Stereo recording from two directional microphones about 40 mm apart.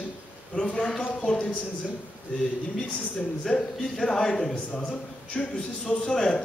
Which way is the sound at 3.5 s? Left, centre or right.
Centre.